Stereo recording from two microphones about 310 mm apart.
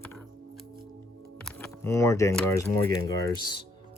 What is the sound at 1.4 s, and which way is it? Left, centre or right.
Speech, centre.